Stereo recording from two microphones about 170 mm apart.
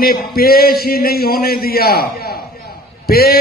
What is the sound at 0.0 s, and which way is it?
A man's voice, 60° left (ahead or behind).